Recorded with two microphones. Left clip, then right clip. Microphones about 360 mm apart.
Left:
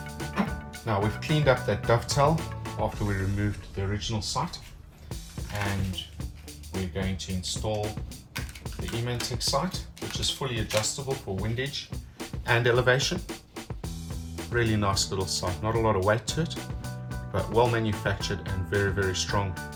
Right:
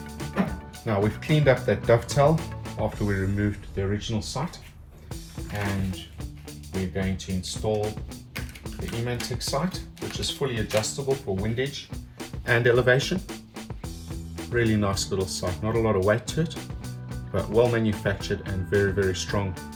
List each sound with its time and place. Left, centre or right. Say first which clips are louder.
0.2 s speech: right 2 dB; centre
5.5 s speech: right 1 dB; centre
12.2 s music: right 3 dB; centre
14.3 s speech: right 3 dB; centre